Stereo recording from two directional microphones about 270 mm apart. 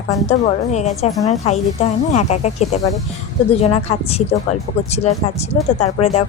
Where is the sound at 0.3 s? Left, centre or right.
Left.